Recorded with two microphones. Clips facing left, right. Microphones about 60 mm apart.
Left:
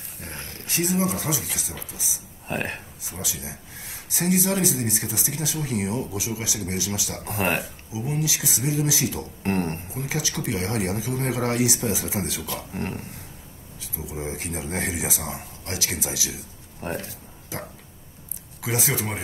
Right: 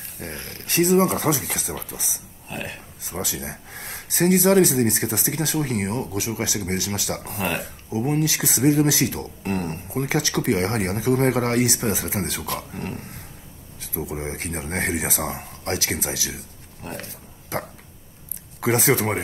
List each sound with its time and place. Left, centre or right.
0.2 s speech: right
2.4 s speech: left
3.1 s speech: right
7.2 s speech: left
7.6 s speech: right
9.4 s speech: left
9.8 s speech: right
12.7 s speech: left
13.7 s a sound: right
14.1 s speech: right
16.9 s a sound: right
18.6 s speech: right